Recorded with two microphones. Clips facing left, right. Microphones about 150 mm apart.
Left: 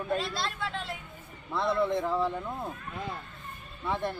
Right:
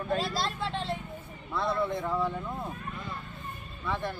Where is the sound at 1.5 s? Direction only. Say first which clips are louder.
Left 2 dB; 25° left (ahead or behind).